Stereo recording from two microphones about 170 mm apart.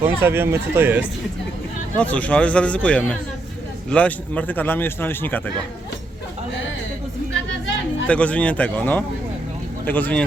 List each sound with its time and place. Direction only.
0.0 s speech: 15° right (ahead or behind)
2.0 s a man's voice: 10° left (ahead or behind)
8.0 s a man's voice: 5° left (ahead or behind)